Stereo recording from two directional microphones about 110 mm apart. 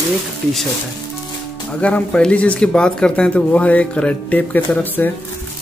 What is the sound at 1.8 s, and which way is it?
Speech, 10° left (ahead or behind).